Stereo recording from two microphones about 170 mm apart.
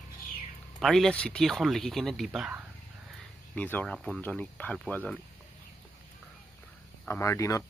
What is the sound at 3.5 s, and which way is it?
Speech, 10° left (ahead or behind).